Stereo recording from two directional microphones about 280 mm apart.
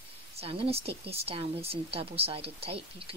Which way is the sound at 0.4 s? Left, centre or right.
Right.